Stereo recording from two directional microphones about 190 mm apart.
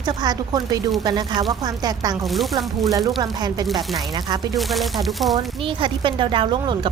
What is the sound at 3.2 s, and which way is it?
Speech, 20° right (ahead or behind).